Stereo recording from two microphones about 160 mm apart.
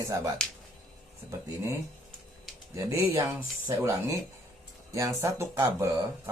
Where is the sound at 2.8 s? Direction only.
20° right (ahead or behind).